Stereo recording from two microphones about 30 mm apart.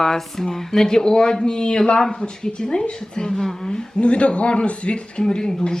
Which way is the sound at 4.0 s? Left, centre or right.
Left.